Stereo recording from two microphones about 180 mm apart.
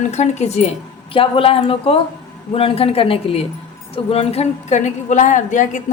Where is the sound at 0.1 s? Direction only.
40° left (ahead or behind).